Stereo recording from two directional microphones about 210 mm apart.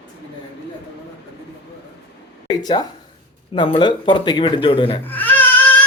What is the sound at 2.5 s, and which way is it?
Speech, 20° left (ahead or behind).